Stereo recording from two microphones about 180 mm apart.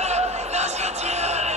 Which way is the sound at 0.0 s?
35° right (ahead or behind).